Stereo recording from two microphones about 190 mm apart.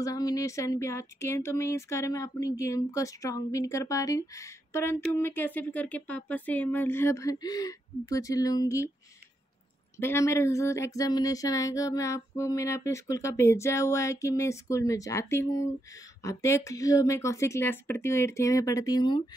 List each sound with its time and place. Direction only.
0.0 s speech: 20° left (ahead or behind)
9.9 s speech: 15° left (ahead or behind)